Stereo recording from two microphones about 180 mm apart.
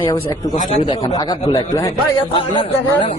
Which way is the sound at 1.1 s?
25° left (ahead or behind).